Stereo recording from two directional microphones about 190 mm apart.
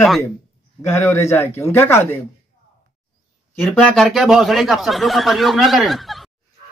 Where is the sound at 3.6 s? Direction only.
5° left (ahead or behind).